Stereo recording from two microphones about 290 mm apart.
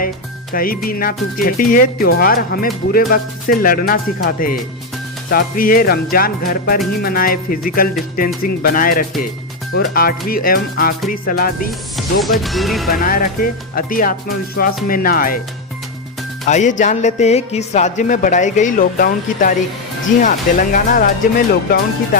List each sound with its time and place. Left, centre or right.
0.5 s a man's voice: left
2.9 s music: left
3.6 s a man's voice: left
5.3 s music: left
7.0 s a man's voice: left
9.7 s music: left
11.1 s a man's voice: left
11.9 s music: centre
12.9 s a man's voice: left
16.5 s a man's voice: left